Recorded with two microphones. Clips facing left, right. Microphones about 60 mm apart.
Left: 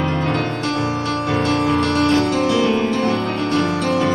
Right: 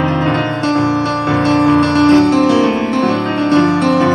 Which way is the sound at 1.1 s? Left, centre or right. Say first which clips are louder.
Right 6 dB; right.